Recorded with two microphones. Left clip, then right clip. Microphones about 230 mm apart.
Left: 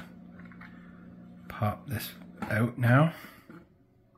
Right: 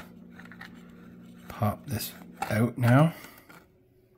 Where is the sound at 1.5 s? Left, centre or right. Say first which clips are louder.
Right 2 dB; right.